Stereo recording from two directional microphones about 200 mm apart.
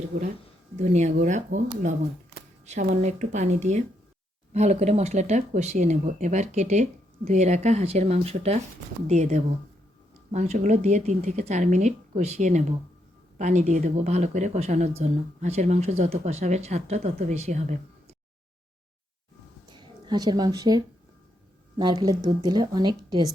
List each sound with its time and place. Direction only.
0.1 s speech: 45° right (ahead or behind)
0.8 s speech: 35° right (ahead or behind)
2.8 s speech: 35° right (ahead or behind)
20.1 s a woman's voice: 20° right (ahead or behind)